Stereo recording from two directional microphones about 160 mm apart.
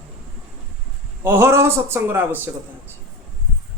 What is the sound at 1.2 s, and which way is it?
A man's voice, 15° right (ahead or behind).